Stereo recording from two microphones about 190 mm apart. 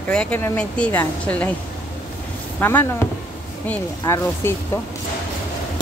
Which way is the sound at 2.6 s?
10° left (ahead or behind).